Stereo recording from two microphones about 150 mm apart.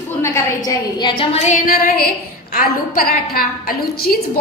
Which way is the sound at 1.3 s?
50° left (ahead or behind).